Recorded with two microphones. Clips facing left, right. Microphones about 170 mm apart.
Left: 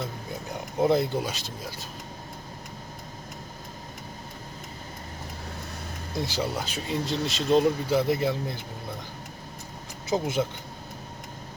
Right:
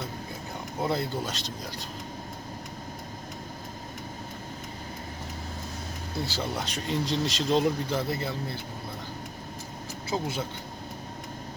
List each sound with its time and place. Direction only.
0.9 s speech: 20° left (ahead or behind)
1.3 s speech: 5° left (ahead or behind)
6.2 s speech: 15° left (ahead or behind)
6.6 s speech: 5° left (ahead or behind)
7.9 s speech: 15° left (ahead or behind)
10.1 s speech: 20° left (ahead or behind)